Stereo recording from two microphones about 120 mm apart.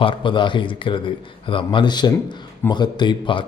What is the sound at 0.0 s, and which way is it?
A man's voice, 45° left (ahead or behind).